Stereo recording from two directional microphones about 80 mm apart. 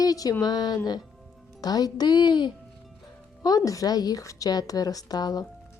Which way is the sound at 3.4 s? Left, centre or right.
Left.